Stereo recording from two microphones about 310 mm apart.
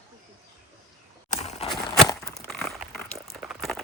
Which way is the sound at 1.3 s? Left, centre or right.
Left.